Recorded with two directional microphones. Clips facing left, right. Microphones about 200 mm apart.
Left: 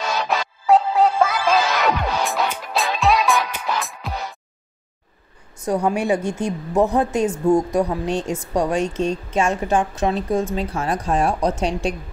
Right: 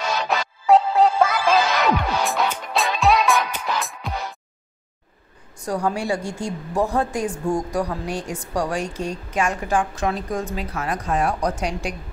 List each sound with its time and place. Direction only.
0.3 s music: centre (ahead or behind)
5.6 s a woman's voice: 20° left (ahead or behind)